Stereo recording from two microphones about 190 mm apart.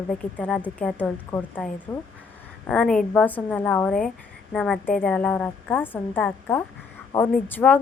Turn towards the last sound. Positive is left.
turn(degrees=10)  # may be behind; listen again after turning